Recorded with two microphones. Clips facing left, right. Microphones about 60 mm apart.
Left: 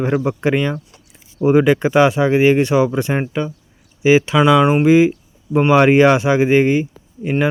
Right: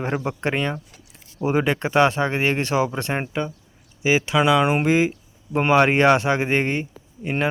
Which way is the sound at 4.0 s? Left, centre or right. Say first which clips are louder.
Left 8 dB; left.